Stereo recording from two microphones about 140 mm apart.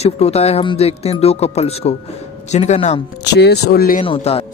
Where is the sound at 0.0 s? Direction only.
50° left (ahead or behind).